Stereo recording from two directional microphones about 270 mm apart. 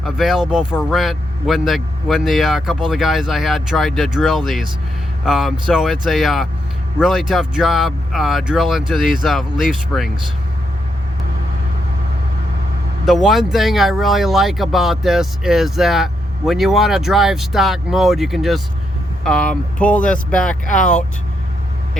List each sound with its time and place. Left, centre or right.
0.0 s speech: centre
13.1 s speech: centre
20.7 s speech: left